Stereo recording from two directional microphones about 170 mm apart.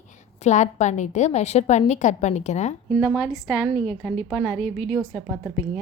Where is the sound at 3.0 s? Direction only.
5° right (ahead or behind).